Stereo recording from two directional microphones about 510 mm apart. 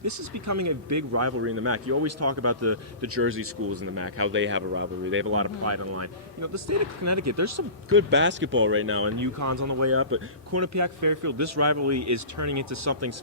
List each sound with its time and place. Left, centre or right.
0.0 s speech: right